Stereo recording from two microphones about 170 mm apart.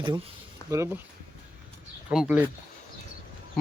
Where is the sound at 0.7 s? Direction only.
15° right (ahead or behind).